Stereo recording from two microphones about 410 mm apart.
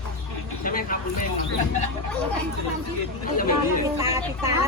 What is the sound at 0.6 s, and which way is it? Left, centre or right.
Vehicle, centre.